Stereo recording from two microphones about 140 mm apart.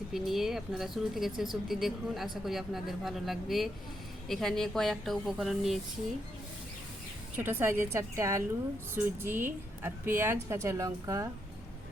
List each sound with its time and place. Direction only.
0.1 s speech: centre (ahead or behind)
7.3 s a woman's voice: 15° right (ahead or behind)